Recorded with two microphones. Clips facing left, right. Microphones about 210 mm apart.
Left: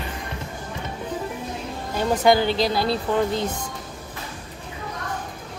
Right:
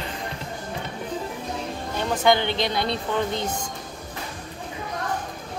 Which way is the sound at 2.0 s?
40° left (ahead or behind).